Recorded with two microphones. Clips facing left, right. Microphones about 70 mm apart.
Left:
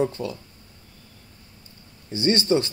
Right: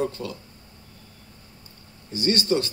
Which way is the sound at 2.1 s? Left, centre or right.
Left.